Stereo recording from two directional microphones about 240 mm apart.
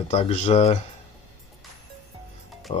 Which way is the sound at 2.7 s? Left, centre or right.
Left.